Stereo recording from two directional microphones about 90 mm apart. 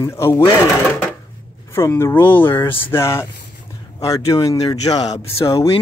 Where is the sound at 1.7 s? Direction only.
30° left (ahead or behind); by 5.2 s 45° left (ahead or behind).